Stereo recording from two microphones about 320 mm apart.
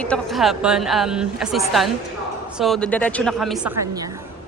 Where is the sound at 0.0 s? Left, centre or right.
Centre.